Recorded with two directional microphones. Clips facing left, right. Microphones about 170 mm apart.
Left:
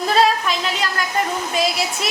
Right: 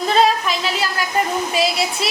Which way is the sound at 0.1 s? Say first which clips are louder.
Right 1 dB; centre (ahead or behind).